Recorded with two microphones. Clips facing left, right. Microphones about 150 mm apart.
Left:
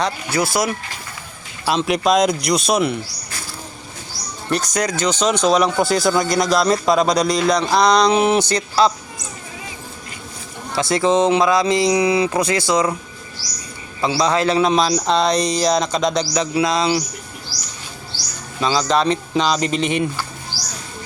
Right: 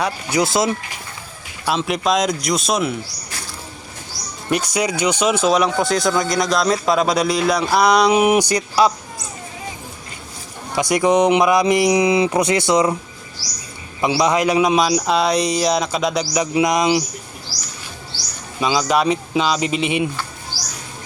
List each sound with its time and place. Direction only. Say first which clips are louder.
0.0 s speech: right 1 dB; 15° right (ahead or behind)
1.6 s speech: left 2 dB; centre (ahead or behind)
4.7 s speech: even; 10° right (ahead or behind)
10.7 s speech: right 1 dB; 15° right (ahead or behind)
14.0 s a man's voice: right 1 dB; 15° right (ahead or behind)
18.6 s a man's voice: even; 10° right (ahead or behind)